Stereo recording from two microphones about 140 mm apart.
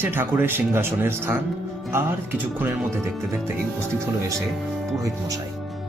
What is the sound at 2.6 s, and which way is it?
Speech, 15° right (ahead or behind).